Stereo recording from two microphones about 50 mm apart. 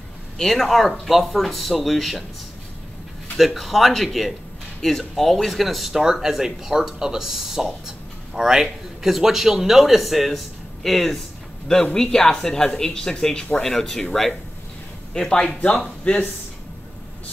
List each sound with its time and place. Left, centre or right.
0.4 s speech: centre
3.3 s speech: centre
15.2 s speech: centre